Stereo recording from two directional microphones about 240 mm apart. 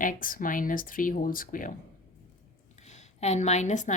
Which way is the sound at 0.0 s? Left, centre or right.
Left.